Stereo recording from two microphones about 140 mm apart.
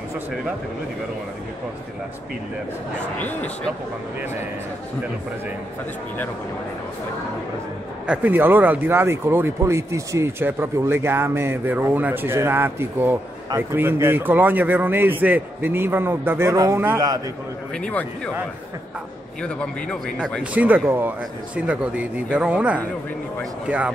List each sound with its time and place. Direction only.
3.2 s speech: 10° left (ahead or behind)
8.1 s speech: 10° right (ahead or behind)
17.7 s speech: 5° left (ahead or behind)
19.4 s speech: 5° left (ahead or behind)
20.5 s speech: 10° right (ahead or behind)